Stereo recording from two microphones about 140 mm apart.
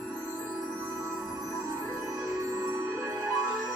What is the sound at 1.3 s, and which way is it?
Music, 25° right (ahead or behind).